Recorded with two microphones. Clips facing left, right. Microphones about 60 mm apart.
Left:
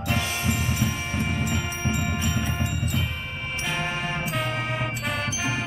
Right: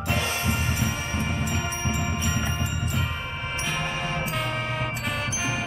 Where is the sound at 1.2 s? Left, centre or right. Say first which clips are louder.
Left 3 dB; left.